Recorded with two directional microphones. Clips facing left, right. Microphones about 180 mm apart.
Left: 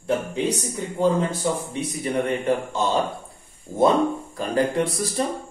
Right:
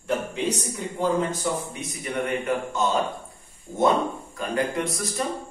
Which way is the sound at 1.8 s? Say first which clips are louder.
Left 5 dB; 30° left (ahead or behind).